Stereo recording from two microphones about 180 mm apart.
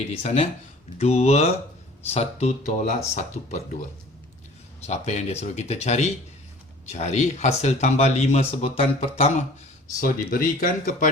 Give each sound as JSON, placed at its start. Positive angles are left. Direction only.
{"t": 0.2, "sound": "speech", "side_deg": 35}
{"t": 10.0, "sound": "speech", "side_deg": 50}